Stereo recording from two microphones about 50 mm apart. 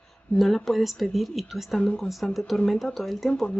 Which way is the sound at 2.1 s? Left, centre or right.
Centre.